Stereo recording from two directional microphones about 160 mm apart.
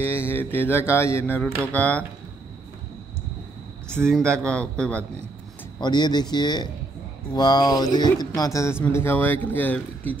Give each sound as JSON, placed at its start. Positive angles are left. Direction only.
{"t": 0.1, "sound": "mantra", "side_deg": 15}
{"t": 4.0, "sound": "a man's voice", "side_deg": 5}
{"t": 5.8, "sound": "speech", "side_deg": 25}
{"t": 8.8, "sound": "mantra", "side_deg": 15}